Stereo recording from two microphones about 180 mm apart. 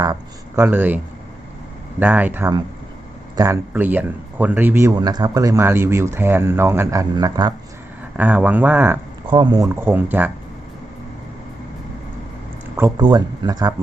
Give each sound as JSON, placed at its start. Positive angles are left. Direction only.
{"t": 0.0, "sound": "speech", "side_deg": -15}
{"t": 8.1, "sound": "speech", "side_deg": -10}
{"t": 9.3, "sound": "speech", "side_deg": -25}
{"t": 12.7, "sound": "speech", "side_deg": -20}